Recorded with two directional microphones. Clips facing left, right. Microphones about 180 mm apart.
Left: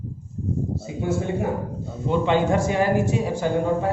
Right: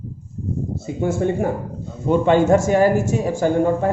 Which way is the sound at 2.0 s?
45° right (ahead or behind).